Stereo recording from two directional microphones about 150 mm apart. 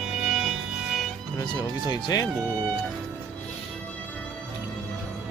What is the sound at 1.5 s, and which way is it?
Speech, 25° left (ahead or behind).